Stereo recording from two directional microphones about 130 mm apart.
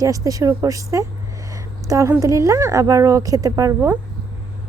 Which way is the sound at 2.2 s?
25° right (ahead or behind).